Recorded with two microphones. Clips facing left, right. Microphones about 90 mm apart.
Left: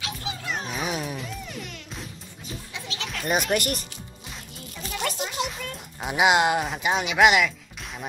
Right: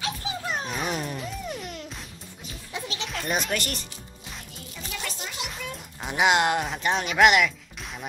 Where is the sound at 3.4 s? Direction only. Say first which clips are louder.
Left 5 dB; 15° left (ahead or behind).